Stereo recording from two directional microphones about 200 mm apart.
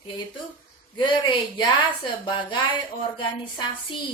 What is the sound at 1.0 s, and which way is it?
Speech, 25° left (ahead or behind).